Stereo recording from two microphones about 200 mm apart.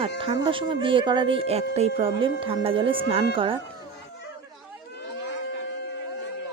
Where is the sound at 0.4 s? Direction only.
25° right (ahead or behind).